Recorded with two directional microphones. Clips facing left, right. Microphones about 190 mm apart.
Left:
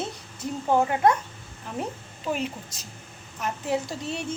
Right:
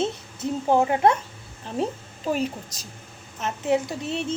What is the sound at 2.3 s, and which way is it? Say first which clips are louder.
Speech: right 3 dB; 40° right (ahead or behind).